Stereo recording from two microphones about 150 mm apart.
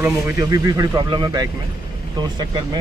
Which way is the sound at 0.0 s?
20° right (ahead or behind).